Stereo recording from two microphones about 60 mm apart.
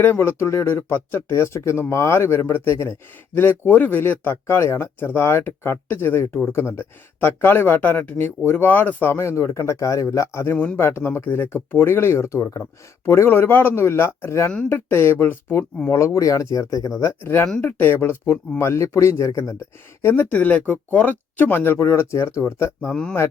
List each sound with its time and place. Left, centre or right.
0.0 s speech: left
1.3 s speech: left
3.7 s speech: left
9.1 s speech: left
13.2 s speech: left
15.9 s speech: left
17.6 s speech: left
20.3 s speech: left
22.9 s speech: centre